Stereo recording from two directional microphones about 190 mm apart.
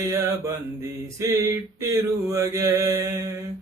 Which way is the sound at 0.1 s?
15° right (ahead or behind).